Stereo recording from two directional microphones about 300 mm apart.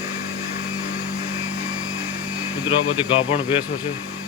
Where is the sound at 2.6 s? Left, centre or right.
Centre.